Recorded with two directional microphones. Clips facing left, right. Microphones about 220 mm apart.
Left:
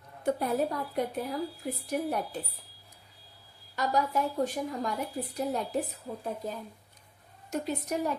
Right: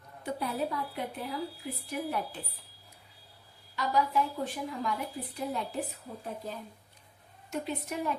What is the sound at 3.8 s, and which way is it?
A woman's voice, 45° left (ahead or behind).